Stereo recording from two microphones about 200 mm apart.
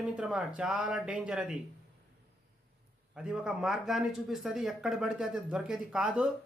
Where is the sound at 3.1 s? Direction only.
5° right (ahead or behind).